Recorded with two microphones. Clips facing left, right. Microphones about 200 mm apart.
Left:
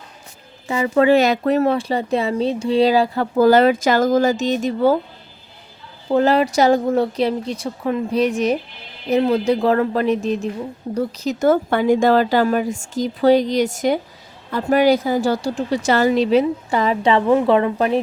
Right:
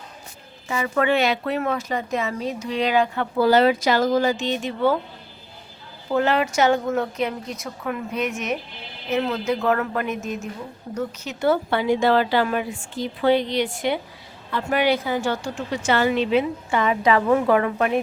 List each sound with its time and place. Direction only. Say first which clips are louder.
0.7 s speech: left 7 dB; 30° left (ahead or behind)
6.1 s a woman's voice: left 5 dB; 35° left (ahead or behind)